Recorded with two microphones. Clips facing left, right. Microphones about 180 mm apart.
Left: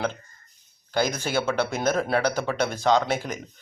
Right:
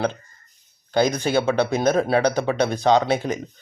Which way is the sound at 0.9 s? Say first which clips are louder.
Right 5 dB; 20° right (ahead or behind).